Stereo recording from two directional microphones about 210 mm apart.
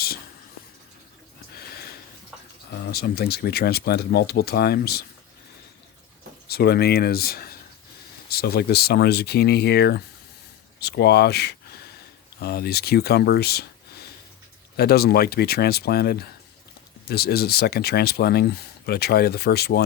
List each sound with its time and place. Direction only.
2.8 s speech: 50° left (ahead or behind)
6.5 s speech: 50° left (ahead or behind)